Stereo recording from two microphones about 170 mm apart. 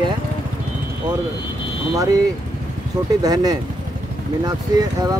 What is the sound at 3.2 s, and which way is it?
Speech, 25° right (ahead or behind).